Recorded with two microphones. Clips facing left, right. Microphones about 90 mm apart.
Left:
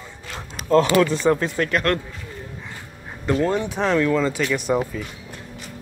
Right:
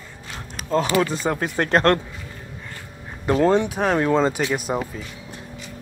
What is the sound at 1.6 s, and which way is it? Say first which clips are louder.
Speech: right 6 dB; 35° right (ahead or behind).